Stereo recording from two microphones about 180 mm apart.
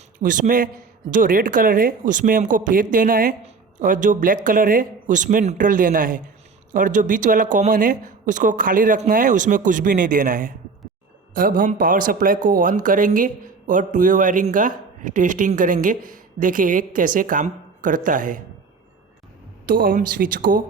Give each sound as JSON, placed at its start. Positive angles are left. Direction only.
{"t": 0.2, "sound": "speech", "side_deg": -50}
{"t": 19.6, "sound": "speech", "side_deg": -50}